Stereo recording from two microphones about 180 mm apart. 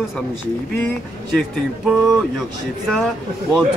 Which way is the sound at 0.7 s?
10° left (ahead or behind).